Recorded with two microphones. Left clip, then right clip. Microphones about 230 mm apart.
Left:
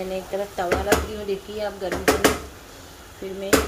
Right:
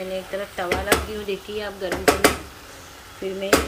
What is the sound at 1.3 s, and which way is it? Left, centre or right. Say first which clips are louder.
Speech: left 2 dB; centre.